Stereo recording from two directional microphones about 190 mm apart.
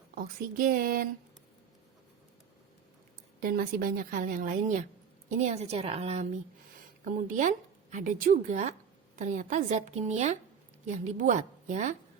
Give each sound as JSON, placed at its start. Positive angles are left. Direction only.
{"t": 0.1, "sound": "a woman's voice", "side_deg": -50}
{"t": 3.4, "sound": "a woman's voice", "side_deg": -50}
{"t": 7.0, "sound": "a woman's voice", "side_deg": -45}